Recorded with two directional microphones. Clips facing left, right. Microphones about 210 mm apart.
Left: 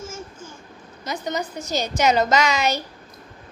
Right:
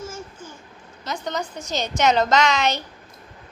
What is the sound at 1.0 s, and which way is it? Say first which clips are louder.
Speech: left 1 dB; 10° left (ahead or behind).